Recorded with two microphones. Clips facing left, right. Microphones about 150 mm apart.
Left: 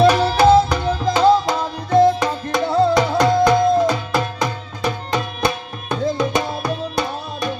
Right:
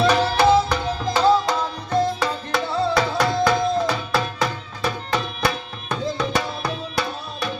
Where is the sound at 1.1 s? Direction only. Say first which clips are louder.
Left 3 dB; 10° left (ahead or behind).